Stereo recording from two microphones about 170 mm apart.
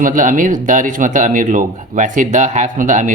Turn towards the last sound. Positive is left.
turn(degrees=-50)  # may be behind; listen again after turning